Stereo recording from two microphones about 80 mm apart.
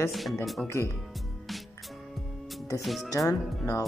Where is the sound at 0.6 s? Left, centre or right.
Left.